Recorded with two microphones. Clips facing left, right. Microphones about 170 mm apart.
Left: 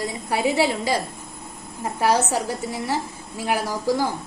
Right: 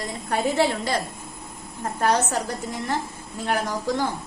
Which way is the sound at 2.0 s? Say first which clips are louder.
Left 2 dB; 10° left (ahead or behind).